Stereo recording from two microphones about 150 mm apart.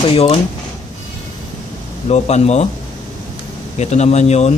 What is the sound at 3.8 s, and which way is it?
Speech, 50° left (ahead or behind).